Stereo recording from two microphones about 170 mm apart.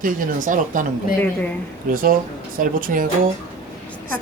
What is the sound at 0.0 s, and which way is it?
Speech, 50° right (ahead or behind).